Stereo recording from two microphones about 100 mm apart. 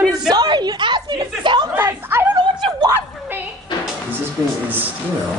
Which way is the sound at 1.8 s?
20° right (ahead or behind).